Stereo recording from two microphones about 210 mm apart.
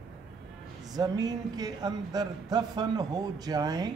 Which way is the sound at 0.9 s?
20° right (ahead or behind).